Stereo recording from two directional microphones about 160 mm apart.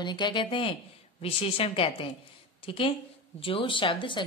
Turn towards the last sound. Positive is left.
turn(degrees=30)  # may be behind; listen again after turning